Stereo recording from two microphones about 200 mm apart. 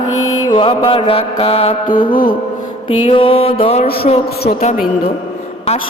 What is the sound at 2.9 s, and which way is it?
Mantra, 25° left (ahead or behind).